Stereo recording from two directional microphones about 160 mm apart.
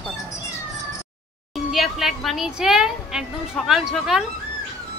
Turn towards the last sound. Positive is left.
turn(degrees=0)  # may be behind; listen again after turning